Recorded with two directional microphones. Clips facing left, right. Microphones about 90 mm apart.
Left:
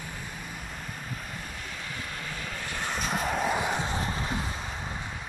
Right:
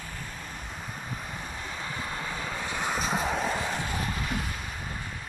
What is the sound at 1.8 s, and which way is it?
Vehicle, 25° right (ahead or behind).